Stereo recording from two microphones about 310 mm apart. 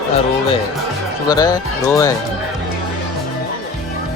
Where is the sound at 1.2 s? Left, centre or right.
Centre.